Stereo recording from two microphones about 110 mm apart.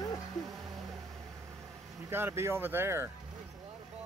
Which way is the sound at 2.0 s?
20° right (ahead or behind).